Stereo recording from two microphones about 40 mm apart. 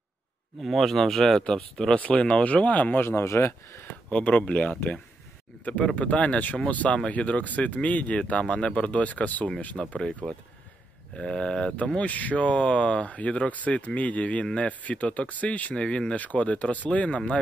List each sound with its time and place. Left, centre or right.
0.6 s speech: centre
1.4 s speech: centre
2.4 s speech: left
3.0 s speech: left
4.1 s speech: left
5.9 s speech: left
9.8 s speech: centre
12.0 s speech: left
14.4 s speech: left
14.7 s speech: left
15.7 s speech: left
16.1 s speech: left